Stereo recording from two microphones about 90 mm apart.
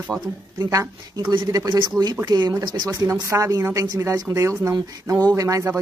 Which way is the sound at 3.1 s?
35° right (ahead or behind).